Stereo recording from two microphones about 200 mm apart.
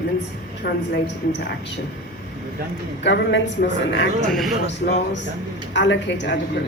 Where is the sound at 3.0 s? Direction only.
60° left (ahead or behind).